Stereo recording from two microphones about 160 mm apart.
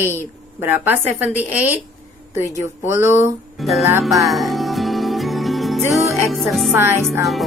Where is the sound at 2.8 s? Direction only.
15° right (ahead or behind).